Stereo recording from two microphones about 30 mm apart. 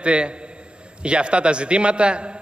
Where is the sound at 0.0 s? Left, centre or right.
Right.